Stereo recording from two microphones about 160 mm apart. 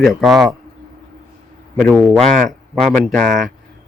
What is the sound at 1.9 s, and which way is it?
A man's voice, 5° right (ahead or behind).